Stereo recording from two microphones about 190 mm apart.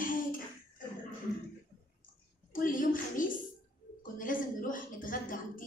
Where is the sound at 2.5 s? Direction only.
45° left (ahead or behind).